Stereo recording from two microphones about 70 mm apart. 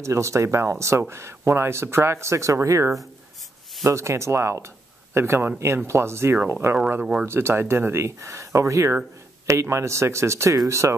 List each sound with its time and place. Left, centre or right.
0.0 s speech: right
7.0 s speech: centre
7.2 s speech: right